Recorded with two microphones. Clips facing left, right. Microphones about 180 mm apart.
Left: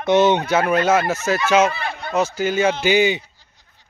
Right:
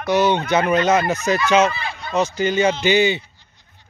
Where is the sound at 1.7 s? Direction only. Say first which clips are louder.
Left 2 dB; 55° left (ahead or behind).